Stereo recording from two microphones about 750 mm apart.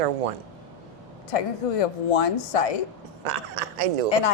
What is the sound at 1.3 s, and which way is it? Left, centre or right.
Speech, left.